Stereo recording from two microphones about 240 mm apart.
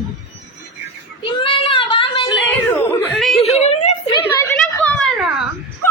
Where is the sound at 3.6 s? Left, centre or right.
Left.